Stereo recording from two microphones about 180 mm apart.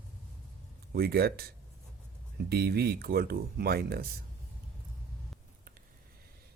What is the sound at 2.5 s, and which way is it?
Speech, 65° right (ahead or behind).